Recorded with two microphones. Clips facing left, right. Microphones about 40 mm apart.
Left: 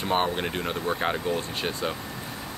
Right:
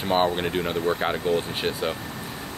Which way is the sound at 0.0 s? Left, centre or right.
Centre.